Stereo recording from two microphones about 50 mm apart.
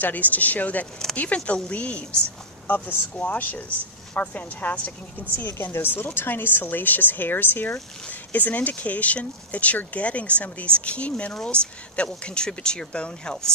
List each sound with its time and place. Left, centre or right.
0.0 s speech: left
2.7 s speech: left
5.6 s a woman's voice: left; by 13.5 s centre